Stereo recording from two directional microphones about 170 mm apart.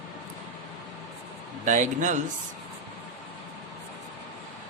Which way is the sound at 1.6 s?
50° right (ahead or behind).